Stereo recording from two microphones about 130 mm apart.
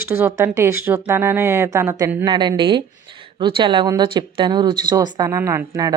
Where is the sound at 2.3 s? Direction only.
35° right (ahead or behind).